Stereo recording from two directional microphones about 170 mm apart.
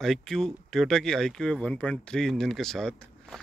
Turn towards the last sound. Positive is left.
turn(degrees=5)  # may be behind; listen again after turning